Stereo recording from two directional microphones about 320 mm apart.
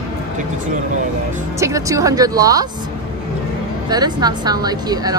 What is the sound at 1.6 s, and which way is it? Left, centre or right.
Speech, centre.